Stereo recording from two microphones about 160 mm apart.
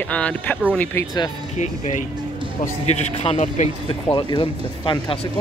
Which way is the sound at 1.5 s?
45° left (ahead or behind).